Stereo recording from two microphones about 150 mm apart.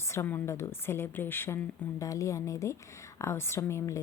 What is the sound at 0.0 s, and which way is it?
A woman's voice, 20° left (ahead or behind).